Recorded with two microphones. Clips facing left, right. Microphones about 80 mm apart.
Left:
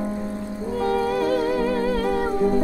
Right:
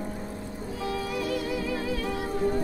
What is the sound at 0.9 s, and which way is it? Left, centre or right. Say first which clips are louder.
Music: left 9 dB; left.